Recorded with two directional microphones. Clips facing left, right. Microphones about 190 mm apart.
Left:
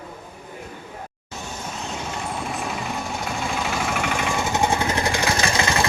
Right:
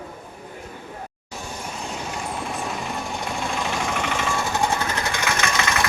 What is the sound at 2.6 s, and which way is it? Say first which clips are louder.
Vehicle: left 1 dB; centre (ahead or behind).